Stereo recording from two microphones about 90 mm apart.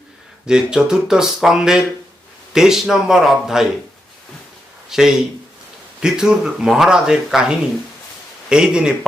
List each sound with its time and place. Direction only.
0.4 s speech: 10° right (ahead or behind)
4.9 s speech: 5° right (ahead or behind)